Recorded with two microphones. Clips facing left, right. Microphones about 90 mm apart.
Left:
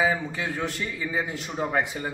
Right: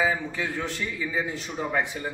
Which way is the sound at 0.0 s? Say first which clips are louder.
Left 1 dB; 15° left (ahead or behind).